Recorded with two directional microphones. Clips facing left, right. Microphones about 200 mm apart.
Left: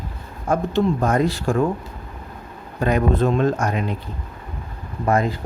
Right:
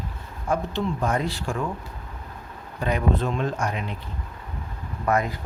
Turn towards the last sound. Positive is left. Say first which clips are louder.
# left 4 dB
turn(degrees=30)  # may be behind; listen again after turning